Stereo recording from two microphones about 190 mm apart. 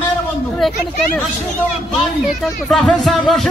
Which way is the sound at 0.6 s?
Centre (ahead or behind).